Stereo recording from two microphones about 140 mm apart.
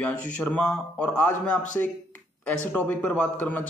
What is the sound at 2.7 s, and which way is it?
Speech, 10° left (ahead or behind).